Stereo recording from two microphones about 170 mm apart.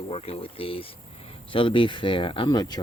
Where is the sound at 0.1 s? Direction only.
35° left (ahead or behind).